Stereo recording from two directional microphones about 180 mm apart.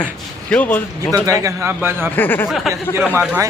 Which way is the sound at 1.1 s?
20° right (ahead or behind).